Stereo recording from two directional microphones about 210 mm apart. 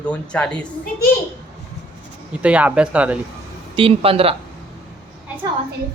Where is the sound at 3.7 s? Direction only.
25° right (ahead or behind).